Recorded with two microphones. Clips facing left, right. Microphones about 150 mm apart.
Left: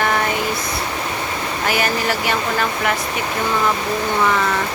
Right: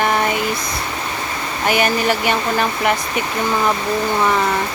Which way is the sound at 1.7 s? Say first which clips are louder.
Right 4 dB; 20° right (ahead or behind).